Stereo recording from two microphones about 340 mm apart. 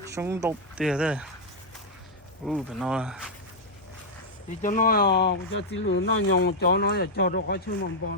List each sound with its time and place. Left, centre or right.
0.1 s speech: centre
2.5 s speech: centre
4.6 s speech: left